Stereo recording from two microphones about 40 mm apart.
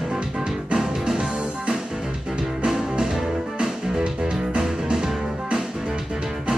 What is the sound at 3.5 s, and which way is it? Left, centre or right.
Music, centre.